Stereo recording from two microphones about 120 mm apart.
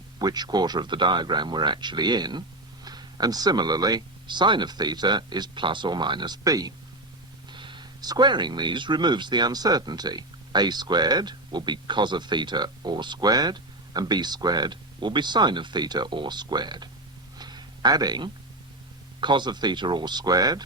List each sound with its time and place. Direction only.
0.2 s speech: 35° right (ahead or behind)
7.5 s speech: 40° right (ahead or behind)
17.3 s a sound: 35° right (ahead or behind)
19.2 s speech: 40° right (ahead or behind)